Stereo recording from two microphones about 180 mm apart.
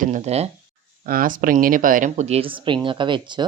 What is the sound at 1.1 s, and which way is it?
Speech, 50° right (ahead or behind).